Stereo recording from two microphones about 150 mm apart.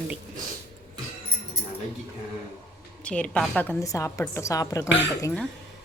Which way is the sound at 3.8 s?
20° left (ahead or behind).